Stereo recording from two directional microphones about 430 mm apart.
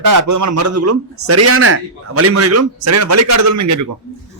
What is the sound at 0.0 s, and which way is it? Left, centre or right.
A man's voice, right.